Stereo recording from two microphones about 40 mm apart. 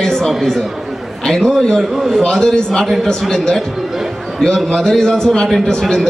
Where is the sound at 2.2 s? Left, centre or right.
Centre.